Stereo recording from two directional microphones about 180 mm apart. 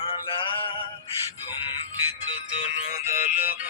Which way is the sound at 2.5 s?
40° left (ahead or behind).